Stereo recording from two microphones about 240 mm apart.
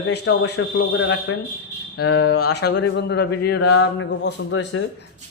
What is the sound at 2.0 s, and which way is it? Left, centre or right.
Speech, left.